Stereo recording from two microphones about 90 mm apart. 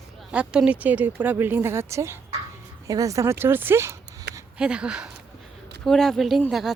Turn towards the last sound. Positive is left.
turn(degrees=-5)  # may be behind; listen again after turning